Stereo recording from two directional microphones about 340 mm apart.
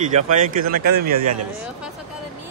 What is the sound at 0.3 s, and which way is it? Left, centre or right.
Speech, right.